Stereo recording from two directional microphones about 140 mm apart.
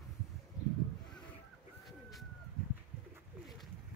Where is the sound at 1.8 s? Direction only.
Centre (ahead or behind).